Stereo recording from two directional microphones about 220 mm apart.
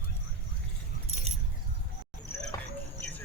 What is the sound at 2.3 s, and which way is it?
Basketball bounce, 10° left (ahead or behind).